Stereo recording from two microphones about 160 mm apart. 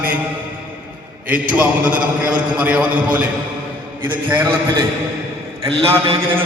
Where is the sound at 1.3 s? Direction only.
10° right (ahead or behind).